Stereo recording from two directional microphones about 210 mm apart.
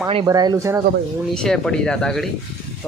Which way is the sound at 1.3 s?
5° left (ahead or behind).